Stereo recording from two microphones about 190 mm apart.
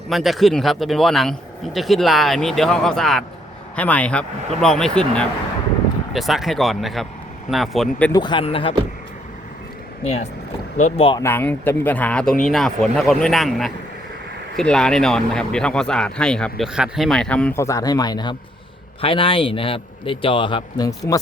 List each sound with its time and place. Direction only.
0.1 s speech: centre (ahead or behind)
8.1 s a man's voice: 25° left (ahead or behind)
10.8 s speech: 35° left (ahead or behind)
11.2 s a man's voice: 10° left (ahead or behind)